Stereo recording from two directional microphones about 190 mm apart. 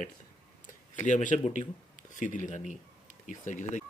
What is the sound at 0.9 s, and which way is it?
Speech, 40° left (ahead or behind).